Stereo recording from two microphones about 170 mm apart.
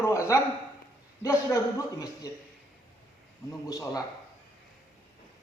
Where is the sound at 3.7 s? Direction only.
20° left (ahead or behind).